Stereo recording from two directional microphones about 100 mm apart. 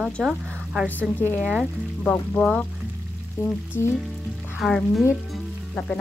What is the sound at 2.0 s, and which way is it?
A woman's voice, 15° left (ahead or behind).